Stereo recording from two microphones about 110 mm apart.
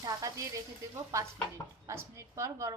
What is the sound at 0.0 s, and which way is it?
A woman's voice, 35° right (ahead or behind).